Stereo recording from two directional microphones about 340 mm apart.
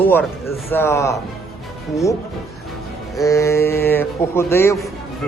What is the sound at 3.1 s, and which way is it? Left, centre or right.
A man's voice, centre.